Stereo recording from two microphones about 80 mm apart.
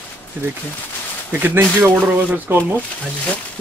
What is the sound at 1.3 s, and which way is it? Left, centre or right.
Speech, right.